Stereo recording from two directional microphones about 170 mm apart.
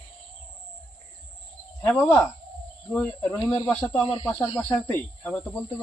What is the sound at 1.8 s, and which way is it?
Speech, 10° left (ahead or behind).